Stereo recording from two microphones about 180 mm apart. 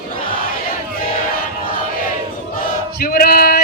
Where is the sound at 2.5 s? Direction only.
55° left (ahead or behind).